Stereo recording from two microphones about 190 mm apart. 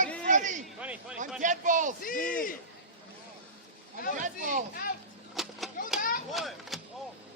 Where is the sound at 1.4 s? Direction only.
40° right (ahead or behind).